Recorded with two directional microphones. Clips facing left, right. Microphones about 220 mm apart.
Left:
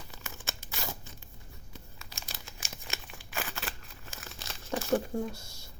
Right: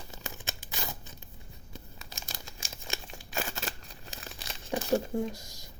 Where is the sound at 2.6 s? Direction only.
25° right (ahead or behind).